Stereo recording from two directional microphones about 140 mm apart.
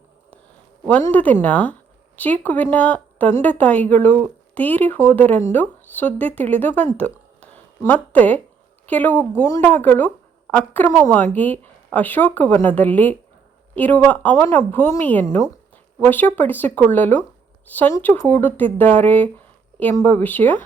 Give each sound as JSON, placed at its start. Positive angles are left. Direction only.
{"t": 0.9, "sound": "a woman's voice", "side_deg": 10}
{"t": 6.9, "sound": "a sound", "side_deg": 10}
{"t": 8.9, "sound": "a woman's voice", "side_deg": 10}